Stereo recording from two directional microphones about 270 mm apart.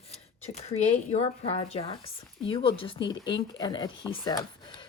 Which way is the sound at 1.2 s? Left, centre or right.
Left.